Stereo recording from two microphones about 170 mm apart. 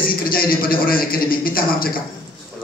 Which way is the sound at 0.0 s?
60° left (ahead or behind).